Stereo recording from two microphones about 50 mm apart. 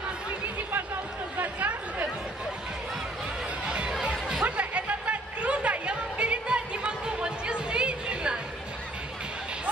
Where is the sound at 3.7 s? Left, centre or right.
Centre.